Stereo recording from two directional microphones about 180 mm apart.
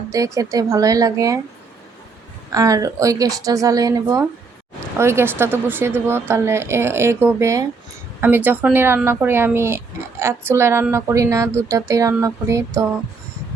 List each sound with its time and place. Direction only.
0.1 s speech: 20° right (ahead or behind)
2.5 s a woman's voice: 20° right (ahead or behind)